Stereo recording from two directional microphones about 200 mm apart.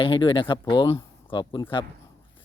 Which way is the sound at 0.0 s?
25° left (ahead or behind).